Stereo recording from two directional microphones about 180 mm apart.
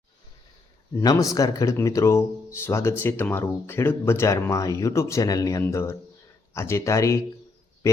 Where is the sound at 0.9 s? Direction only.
15° left (ahead or behind).